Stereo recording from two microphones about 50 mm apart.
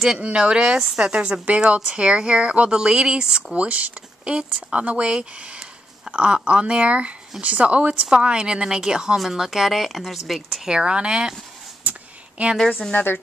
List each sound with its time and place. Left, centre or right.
0.2 s speech: centre
3.5 s a woman's voice: right; by 10.7 s centre
10.7 s a woman's voice: centre
11.9 s a sound: right
12.4 s speech: right
12.9 s speech: left